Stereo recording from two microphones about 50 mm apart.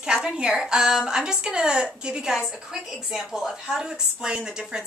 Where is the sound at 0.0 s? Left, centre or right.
Centre.